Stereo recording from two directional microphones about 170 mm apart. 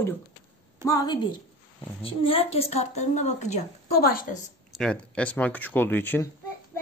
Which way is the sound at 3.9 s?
60° left (ahead or behind).